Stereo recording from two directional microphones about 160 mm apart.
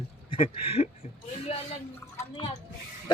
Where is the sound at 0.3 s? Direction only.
35° left (ahead or behind).